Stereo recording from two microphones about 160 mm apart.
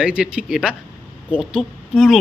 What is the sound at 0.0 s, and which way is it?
A woman's voice, 5° right (ahead or behind).